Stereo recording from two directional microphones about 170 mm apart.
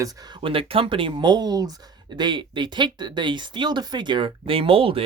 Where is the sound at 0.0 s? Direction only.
20° right (ahead or behind).